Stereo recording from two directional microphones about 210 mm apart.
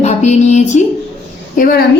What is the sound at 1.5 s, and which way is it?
Speech, 40° left (ahead or behind).